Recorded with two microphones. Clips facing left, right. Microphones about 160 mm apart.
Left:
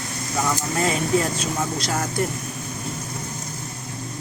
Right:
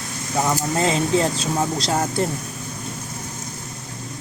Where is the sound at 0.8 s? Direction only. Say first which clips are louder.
Right 2 dB; 25° right (ahead or behind).